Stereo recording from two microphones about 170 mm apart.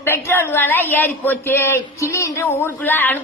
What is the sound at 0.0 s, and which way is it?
Child singing, 15° left (ahead or behind).